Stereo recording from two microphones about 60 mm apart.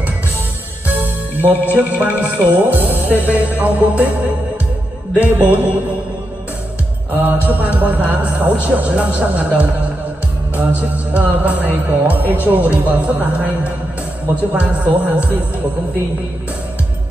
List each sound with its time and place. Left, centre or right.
0.8 s speech: right
7.4 s speech: right